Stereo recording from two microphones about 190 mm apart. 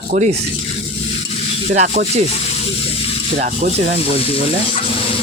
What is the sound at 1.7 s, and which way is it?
Speech, 40° right (ahead or behind).